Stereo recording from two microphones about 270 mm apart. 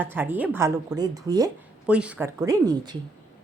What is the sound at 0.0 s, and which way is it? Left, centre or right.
Speech, centre.